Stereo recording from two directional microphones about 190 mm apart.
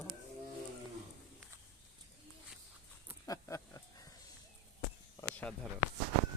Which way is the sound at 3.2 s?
15° left (ahead or behind).